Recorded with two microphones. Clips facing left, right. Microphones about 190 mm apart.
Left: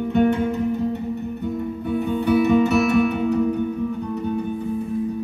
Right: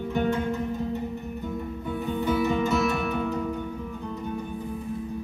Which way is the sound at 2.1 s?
65° left (ahead or behind).